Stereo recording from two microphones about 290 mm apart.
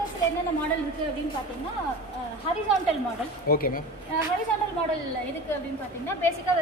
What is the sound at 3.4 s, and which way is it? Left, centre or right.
Speech, left.